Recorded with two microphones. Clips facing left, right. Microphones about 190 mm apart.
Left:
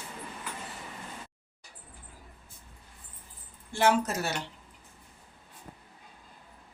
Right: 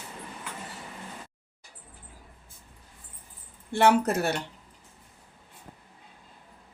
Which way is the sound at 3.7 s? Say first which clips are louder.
Right 4 dB; 60° right (ahead or behind).